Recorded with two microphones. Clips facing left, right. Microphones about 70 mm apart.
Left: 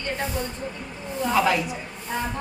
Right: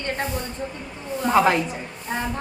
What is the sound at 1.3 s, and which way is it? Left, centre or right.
Speech, right.